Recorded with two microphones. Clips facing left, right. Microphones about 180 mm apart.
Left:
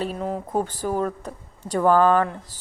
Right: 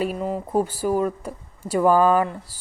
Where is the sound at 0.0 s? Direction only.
5° right (ahead or behind).